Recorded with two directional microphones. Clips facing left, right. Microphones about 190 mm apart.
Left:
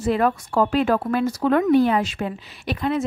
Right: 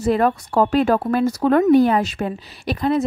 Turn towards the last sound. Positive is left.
turn(degrees=-35)  # may be behind; listen again after turning